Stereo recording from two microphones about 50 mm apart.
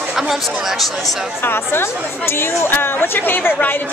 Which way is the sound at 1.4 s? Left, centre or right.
Left.